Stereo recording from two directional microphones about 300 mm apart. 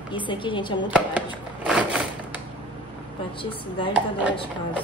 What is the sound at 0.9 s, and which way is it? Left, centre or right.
Chopping, centre.